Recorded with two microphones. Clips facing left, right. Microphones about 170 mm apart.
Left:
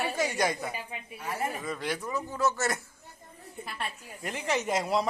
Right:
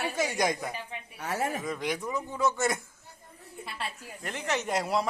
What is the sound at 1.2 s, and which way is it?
Speech, 80° right.